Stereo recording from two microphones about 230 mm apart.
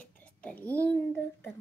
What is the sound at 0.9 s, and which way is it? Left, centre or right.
Speech, centre.